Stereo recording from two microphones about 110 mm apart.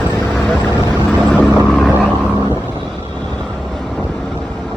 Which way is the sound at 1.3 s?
5° right (ahead or behind).